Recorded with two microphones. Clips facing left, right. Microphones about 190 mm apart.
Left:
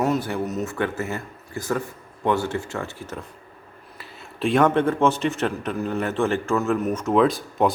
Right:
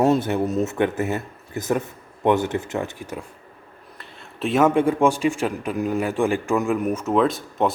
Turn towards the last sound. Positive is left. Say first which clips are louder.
# left 1 dB
turn(degrees=0)  # may be behind; listen again after turning